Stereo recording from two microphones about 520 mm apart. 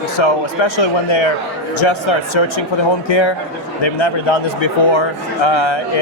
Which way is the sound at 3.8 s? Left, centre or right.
Left.